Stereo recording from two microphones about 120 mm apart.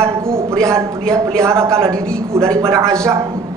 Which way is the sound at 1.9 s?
5° left (ahead or behind).